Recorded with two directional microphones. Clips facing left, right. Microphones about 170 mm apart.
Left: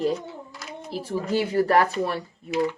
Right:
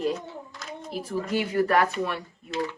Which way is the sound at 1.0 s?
30° left (ahead or behind).